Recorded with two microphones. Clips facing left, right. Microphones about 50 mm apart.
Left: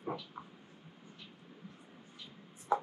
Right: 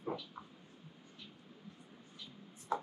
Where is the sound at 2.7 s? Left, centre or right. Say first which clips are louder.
Left 5 dB; centre.